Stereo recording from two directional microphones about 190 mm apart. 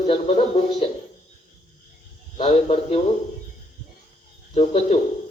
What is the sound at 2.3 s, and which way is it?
Speech, 30° left (ahead or behind).